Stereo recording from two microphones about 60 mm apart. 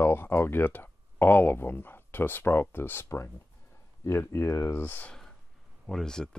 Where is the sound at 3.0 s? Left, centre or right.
Left.